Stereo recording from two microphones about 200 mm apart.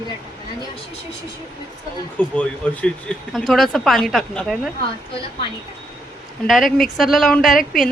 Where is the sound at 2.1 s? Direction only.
5° left (ahead or behind).